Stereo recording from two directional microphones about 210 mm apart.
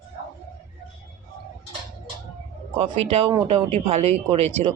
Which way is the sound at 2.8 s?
25° right (ahead or behind).